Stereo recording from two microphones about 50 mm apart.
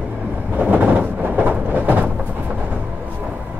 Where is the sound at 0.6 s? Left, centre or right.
Right.